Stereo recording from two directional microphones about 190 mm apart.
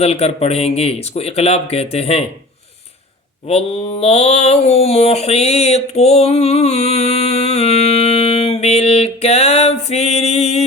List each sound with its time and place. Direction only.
0.0 s speech: 30° left (ahead or behind)
3.4 s mantra: 35° left (ahead or behind)